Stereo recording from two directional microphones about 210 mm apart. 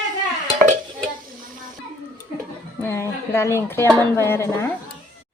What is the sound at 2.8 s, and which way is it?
A woman's voice, 10° left (ahead or behind).